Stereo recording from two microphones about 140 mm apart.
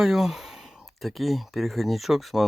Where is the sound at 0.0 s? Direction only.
Centre (ahead or behind).